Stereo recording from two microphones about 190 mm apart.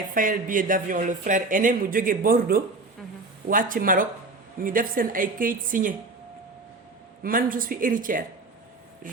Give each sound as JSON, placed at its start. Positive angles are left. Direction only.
{"t": 0.1, "sound": "speech", "side_deg": -45}
{"t": 7.2, "sound": "speech", "side_deg": -50}